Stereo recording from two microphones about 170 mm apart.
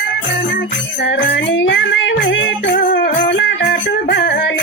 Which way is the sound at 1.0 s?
90° left.